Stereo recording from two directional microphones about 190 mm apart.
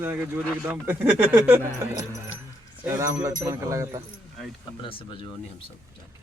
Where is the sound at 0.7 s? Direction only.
10° right (ahead or behind).